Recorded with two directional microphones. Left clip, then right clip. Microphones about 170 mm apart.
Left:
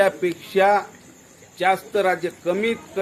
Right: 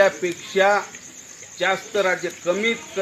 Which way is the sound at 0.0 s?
30° left (ahead or behind).